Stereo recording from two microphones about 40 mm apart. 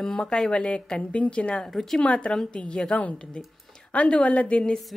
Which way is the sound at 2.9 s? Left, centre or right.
Left.